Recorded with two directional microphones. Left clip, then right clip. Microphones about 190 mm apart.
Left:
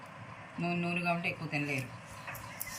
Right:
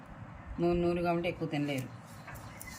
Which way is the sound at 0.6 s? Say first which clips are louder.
Right 4 dB; 20° right (ahead or behind).